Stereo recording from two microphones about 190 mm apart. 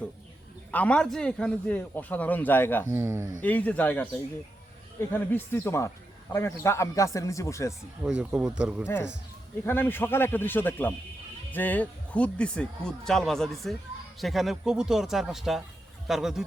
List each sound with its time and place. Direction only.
0.7 s a man's voice: 5° left (ahead or behind)
2.9 s speech: 15° right (ahead or behind)
3.4 s a man's voice: 10° left (ahead or behind)
8.0 s speech: 5° right (ahead or behind)
9.6 s a man's voice: 10° left (ahead or behind)